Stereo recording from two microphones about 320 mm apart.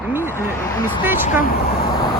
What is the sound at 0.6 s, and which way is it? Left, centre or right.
Speech, centre.